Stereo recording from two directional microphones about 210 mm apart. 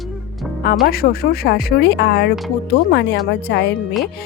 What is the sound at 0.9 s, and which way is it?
Speech, 45° left (ahead or behind).